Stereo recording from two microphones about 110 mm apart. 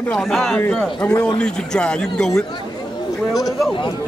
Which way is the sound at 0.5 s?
15° left (ahead or behind).